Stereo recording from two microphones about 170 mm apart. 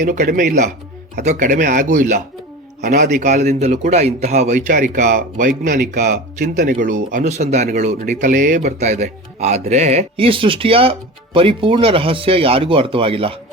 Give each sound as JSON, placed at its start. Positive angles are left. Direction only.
{"t": 0.0, "sound": "speech", "side_deg": -55}
{"t": 1.2, "sound": "speech", "side_deg": -45}